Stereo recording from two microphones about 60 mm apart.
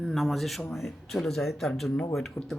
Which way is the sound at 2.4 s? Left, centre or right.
Left.